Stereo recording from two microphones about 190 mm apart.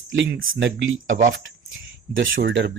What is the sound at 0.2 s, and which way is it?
Speech, 80° right.